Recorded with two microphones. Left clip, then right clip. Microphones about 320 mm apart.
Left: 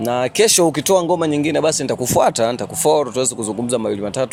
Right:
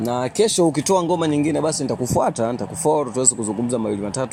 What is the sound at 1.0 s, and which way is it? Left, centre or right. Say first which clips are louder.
Speech: left 2 dB; left.